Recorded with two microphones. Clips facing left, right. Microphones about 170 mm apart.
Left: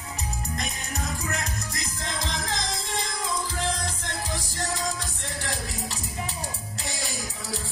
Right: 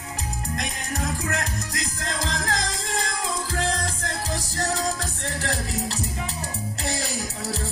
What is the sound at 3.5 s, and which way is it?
Music, 90° right.